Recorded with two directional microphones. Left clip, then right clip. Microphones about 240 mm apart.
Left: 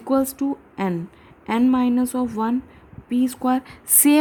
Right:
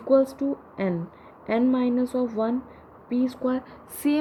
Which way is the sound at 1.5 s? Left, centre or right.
Left.